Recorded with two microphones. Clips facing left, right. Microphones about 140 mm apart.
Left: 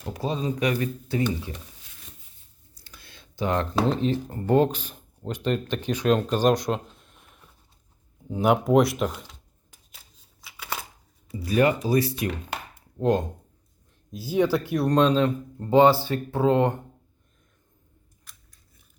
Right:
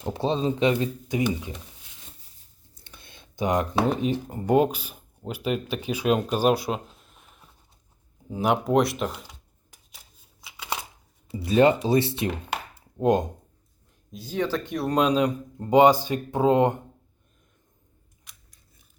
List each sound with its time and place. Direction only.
0.0 s speech: 25° right (ahead or behind)
2.7 s speech: 25° right (ahead or behind); by 9.3 s centre (ahead or behind)
10.4 s a sound: 20° right (ahead or behind)
11.3 s speech: 25° right (ahead or behind)
14.1 s speech: 5° left (ahead or behind)
14.8 s speech: 10° right (ahead or behind)